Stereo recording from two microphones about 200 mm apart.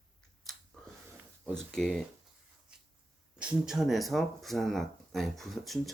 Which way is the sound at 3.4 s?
5° right (ahead or behind).